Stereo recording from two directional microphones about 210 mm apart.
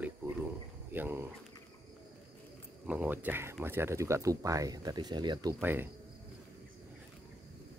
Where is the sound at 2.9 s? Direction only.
5° right (ahead or behind).